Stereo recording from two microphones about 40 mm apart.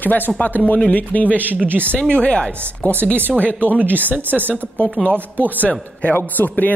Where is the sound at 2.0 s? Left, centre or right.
Left.